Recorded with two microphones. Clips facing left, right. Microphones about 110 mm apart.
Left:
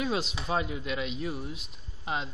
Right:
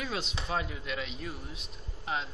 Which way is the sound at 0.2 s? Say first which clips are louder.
Left 3 dB; 5° left (ahead or behind).